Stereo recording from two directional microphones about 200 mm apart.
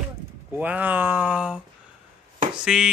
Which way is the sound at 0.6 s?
10° right (ahead or behind).